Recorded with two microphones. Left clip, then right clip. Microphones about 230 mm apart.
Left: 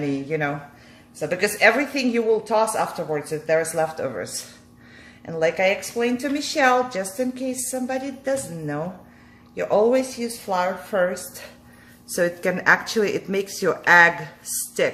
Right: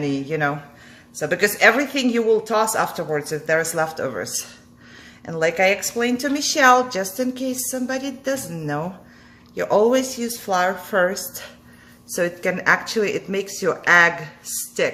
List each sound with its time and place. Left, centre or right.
0.0 s speech: centre
12.1 s speech: centre